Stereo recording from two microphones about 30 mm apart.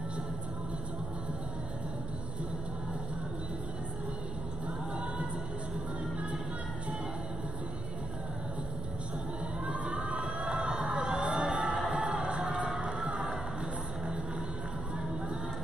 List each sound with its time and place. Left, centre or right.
9.7 s crowd: right
11.3 s music: right
11.6 s music: right